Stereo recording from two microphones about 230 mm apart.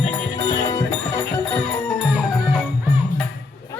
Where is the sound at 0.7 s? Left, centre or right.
Centre.